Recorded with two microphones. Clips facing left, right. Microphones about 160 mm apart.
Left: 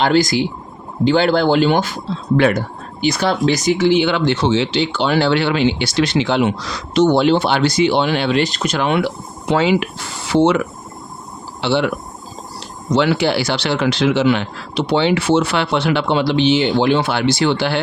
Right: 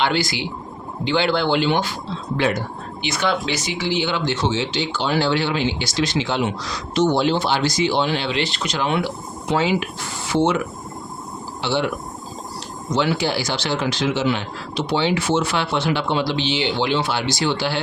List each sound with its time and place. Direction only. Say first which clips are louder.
0.0 s speech: left 7 dB; 45° left (ahead or behind)
2.3 s speech: left 7 dB; 60° left (ahead or behind)
3.0 s speech: left 6 dB; 40° left (ahead or behind); by 10.6 s 70° left (ahead or behind)
11.6 s speech: left 5 dB; 70° left (ahead or behind)
12.9 s speech: left 5 dB; 70° left (ahead or behind)